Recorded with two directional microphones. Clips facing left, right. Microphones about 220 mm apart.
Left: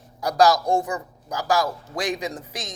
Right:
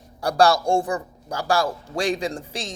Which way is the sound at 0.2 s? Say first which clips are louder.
Even; 30° right (ahead or behind).